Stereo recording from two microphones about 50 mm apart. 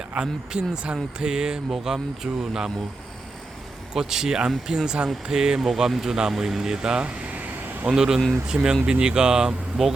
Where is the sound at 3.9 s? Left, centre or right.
Centre; by 7.5 s right.